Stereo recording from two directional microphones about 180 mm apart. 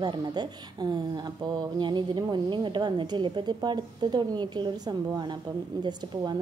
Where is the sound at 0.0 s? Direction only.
25° right (ahead or behind).